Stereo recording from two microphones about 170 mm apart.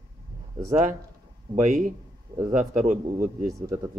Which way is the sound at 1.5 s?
50° right (ahead or behind).